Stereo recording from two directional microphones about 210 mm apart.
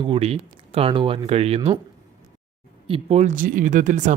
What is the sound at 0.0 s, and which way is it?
Speech, 25° right (ahead or behind).